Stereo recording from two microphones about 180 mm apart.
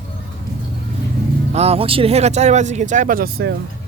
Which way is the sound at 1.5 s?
35° right (ahead or behind).